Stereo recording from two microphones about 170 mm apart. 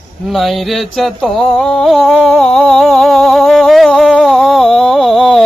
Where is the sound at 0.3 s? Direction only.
Centre (ahead or behind).